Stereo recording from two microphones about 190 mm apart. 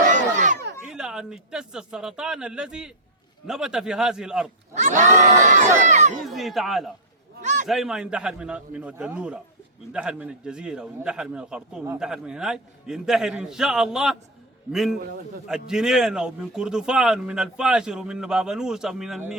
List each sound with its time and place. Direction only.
0.1 s battle cry: 40° right (ahead or behind)
0.9 s speech: 5° right (ahead or behind)
4.7 s speech: 40° right (ahead or behind)
6.2 s speech: centre (ahead or behind)
7.4 s a sound: 40° right (ahead or behind)
7.7 s speech: centre (ahead or behind)